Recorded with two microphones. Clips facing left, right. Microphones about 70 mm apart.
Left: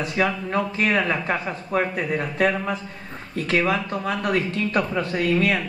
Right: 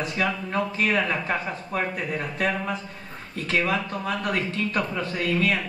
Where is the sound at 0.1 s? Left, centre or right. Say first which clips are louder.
Left 3 dB; left.